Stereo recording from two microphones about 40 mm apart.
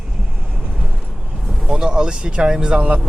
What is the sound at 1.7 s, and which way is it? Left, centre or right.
Speech, centre.